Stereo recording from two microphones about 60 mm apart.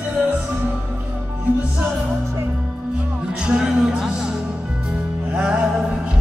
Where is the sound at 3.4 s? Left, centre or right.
Centre.